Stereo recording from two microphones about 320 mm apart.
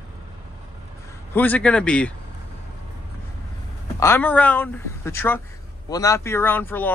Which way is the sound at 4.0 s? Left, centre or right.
Centre.